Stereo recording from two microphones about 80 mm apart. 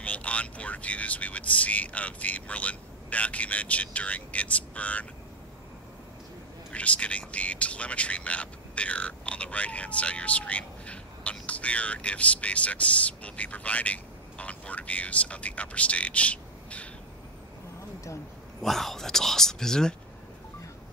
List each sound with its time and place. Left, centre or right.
0.0 s speech: centre
6.7 s speech: centre
18.6 s speech: centre